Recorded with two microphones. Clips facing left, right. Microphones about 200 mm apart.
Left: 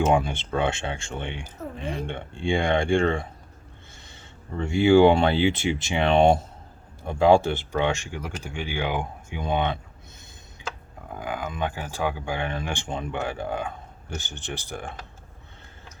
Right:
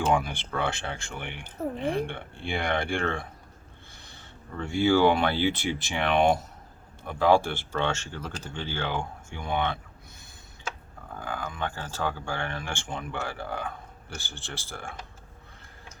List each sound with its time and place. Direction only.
0.1 s speech: 25° left (ahead or behind)
1.6 s speech: 30° right (ahead or behind)
2.0 s speech: 20° left (ahead or behind)
4.5 s speech: 25° left (ahead or behind)
11.1 s speech: 15° left (ahead or behind)